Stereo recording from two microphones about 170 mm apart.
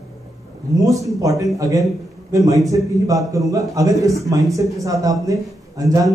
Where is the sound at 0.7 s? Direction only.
20° right (ahead or behind).